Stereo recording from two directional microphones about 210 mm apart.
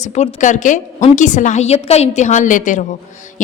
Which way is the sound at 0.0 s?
30° left (ahead or behind).